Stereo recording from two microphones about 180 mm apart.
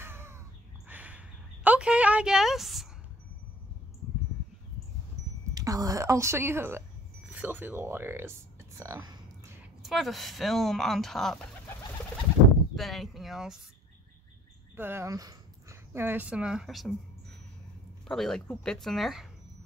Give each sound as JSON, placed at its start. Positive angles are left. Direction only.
{"t": 0.0, "sound": "crow", "side_deg": -15}
{"t": 0.8, "sound": "a sound", "side_deg": -10}
{"t": 5.5, "sound": "a woman's voice", "side_deg": -20}
{"t": 9.8, "sound": "speech", "side_deg": 0}
{"t": 12.7, "sound": "speech", "side_deg": 0}
{"t": 14.8, "sound": "speech", "side_deg": -15}